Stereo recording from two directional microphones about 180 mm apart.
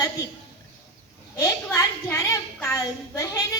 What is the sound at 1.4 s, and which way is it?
A woman's voice, 20° left (ahead or behind).